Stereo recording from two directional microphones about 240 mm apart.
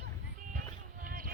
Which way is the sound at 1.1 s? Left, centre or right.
Right.